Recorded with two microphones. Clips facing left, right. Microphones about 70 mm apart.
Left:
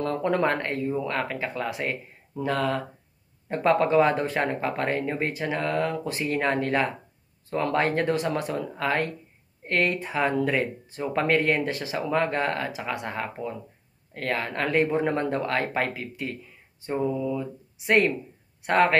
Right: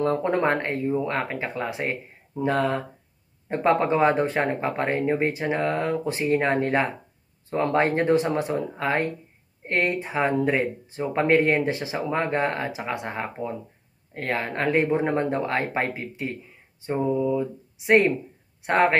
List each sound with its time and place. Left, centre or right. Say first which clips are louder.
0.0 s speech: right 2 dB; right